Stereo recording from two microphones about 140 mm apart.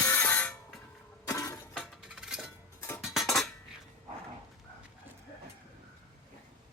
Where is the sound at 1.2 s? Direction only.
25° left (ahead or behind).